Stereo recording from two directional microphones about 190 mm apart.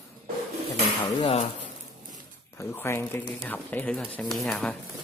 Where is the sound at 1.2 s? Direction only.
30° left (ahead or behind).